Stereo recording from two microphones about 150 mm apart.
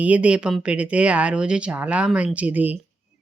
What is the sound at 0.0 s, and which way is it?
Speech, 10° right (ahead or behind).